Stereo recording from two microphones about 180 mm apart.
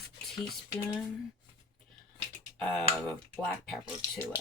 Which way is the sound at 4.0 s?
15° left (ahead or behind).